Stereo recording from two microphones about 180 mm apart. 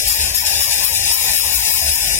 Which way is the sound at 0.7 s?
15° left (ahead or behind).